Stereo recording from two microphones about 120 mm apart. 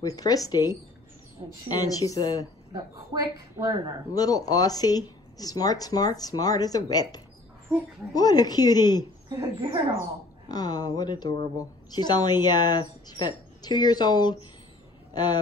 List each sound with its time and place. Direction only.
0.0 s speech: 30° left (ahead or behind)
2.7 s a woman's voice: 30° right (ahead or behind)
4.1 s speech: 30° left (ahead or behind)
9.4 s speech: 45° right (ahead or behind)
10.5 s speech: 35° left (ahead or behind)